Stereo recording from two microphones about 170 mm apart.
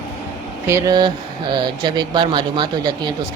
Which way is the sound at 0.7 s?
20° right (ahead or behind).